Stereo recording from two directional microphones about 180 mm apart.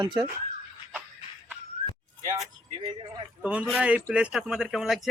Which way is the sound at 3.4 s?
5° right (ahead or behind).